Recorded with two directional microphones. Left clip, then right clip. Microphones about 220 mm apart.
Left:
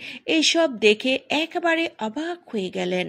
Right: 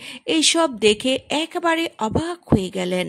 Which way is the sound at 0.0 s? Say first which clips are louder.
Right 2 dB; 30° right (ahead or behind).